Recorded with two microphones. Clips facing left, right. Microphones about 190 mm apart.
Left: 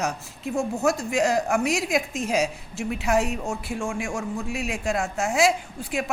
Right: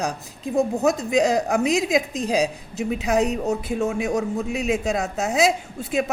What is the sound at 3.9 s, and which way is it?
A woman's voice, 20° right (ahead or behind).